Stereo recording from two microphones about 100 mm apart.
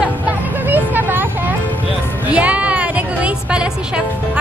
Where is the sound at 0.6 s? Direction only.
20° right (ahead or behind).